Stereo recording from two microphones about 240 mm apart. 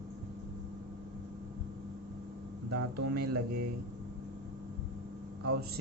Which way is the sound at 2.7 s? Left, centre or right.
Right.